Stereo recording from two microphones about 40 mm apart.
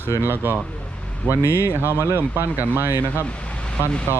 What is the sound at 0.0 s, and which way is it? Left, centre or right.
Speech, right.